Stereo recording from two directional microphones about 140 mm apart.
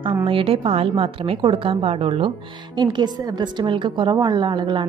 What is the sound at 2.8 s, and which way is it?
A woman's voice, 30° right (ahead or behind).